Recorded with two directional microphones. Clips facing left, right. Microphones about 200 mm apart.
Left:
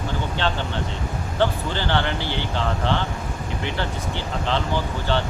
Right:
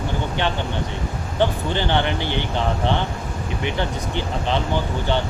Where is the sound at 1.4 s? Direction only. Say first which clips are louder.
Right 2 dB; 20° right (ahead or behind).